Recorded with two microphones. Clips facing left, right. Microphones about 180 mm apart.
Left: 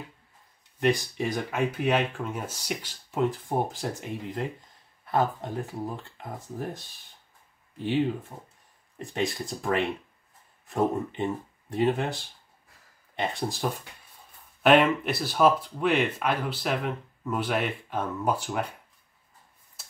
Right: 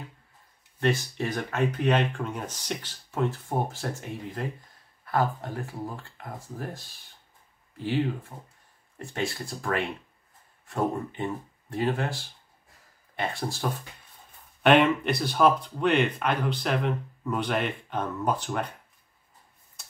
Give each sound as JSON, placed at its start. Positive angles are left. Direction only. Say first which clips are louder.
{"t": 0.7, "sound": "speech", "louder": "left 1 dB", "side_deg": 15}
{"t": 5.0, "sound": "speech", "louder": "left 1 dB", "side_deg": 20}
{"t": 7.8, "sound": "speech", "louder": "left 2 dB", "side_deg": 20}
{"t": 14.6, "sound": "speech", "louder": "even", "side_deg": 0}